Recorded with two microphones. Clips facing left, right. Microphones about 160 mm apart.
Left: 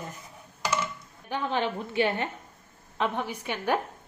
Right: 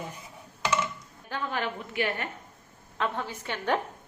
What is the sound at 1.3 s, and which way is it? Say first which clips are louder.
A woman's voice: left 3 dB; 20° left (ahead or behind).